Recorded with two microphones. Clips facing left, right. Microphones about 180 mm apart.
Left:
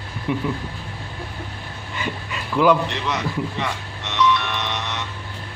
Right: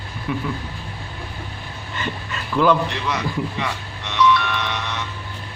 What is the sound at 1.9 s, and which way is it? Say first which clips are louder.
Speech: even; 10° left (ahead or behind).